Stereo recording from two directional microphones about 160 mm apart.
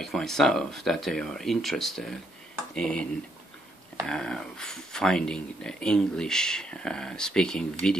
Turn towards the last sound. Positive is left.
turn(degrees=5)  # may be behind; listen again after turning